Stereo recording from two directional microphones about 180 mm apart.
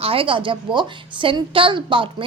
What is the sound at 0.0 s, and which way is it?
A woman's voice, 30° right (ahead or behind).